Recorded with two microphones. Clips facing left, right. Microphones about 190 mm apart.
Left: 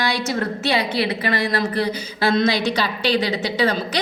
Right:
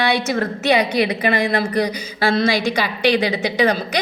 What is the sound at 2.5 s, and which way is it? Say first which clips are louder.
Speech: right 2 dB; 50° right (ahead or behind).